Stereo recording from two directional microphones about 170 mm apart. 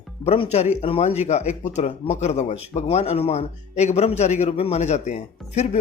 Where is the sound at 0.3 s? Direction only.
40° left (ahead or behind).